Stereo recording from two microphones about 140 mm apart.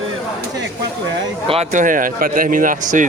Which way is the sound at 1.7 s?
70° right (ahead or behind).